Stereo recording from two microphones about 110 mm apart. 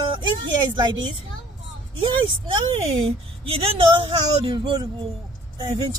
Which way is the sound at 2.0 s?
45° right (ahead or behind).